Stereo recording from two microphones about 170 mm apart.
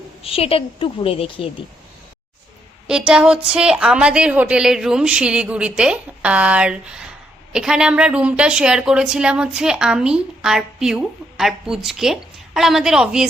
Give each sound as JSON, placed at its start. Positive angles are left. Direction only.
{"t": 0.2, "sound": "a woman's voice", "side_deg": 35}
{"t": 2.8, "sound": "a woman's voice", "side_deg": -5}